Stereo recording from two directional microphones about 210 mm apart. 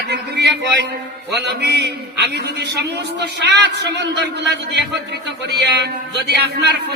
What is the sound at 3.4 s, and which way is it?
A man's voice, 55° right (ahead or behind).